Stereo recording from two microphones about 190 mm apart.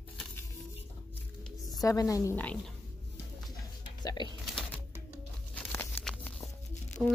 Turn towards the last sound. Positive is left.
turn(degrees=0)  # may be behind; listen again after turning